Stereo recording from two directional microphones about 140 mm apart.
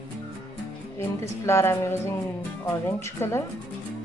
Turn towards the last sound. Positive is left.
turn(degrees=20)  # may be behind; listen again after turning